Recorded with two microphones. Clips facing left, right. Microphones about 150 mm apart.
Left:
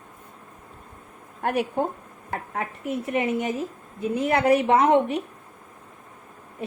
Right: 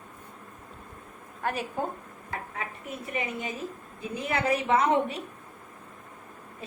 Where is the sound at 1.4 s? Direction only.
60° left (ahead or behind); by 5.1 s 75° left (ahead or behind).